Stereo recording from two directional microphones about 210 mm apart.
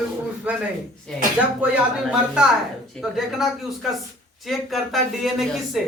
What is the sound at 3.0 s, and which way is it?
A man's voice, centre (ahead or behind).